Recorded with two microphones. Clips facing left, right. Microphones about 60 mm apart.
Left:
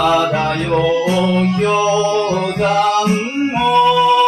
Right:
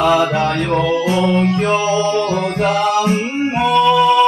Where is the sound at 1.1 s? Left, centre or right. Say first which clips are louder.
Even; right.